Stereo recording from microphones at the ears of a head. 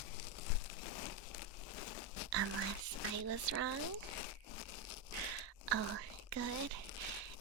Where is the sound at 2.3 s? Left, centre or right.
Right.